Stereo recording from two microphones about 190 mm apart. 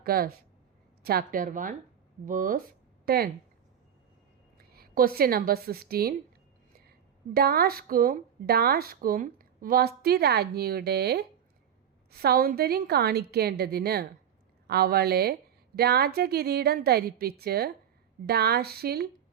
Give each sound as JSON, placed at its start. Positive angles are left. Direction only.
{"t": 0.0, "sound": "a woman's voice", "side_deg": -50}
{"t": 4.5, "sound": "a woman's voice", "side_deg": -50}
{"t": 7.3, "sound": "speech", "side_deg": -55}